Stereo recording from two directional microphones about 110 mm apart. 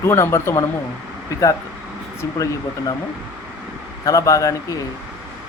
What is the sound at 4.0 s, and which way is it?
Speech, 30° left (ahead or behind).